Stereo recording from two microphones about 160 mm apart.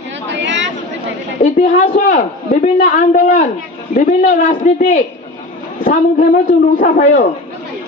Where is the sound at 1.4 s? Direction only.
50° left (ahead or behind).